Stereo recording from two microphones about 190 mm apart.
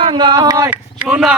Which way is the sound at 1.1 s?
5° right (ahead or behind).